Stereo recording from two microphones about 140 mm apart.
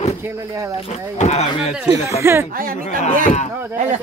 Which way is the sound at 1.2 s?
60° left (ahead or behind).